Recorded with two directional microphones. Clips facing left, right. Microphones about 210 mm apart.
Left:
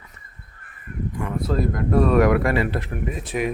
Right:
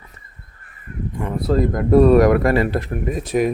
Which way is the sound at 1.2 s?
35° right (ahead or behind).